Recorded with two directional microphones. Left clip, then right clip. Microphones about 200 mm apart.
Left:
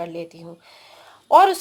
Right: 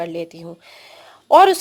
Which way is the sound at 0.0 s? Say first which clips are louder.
Right 4 dB; 45° right (ahead or behind).